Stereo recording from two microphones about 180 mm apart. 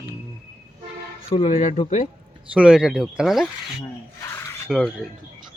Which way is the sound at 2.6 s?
5° right (ahead or behind).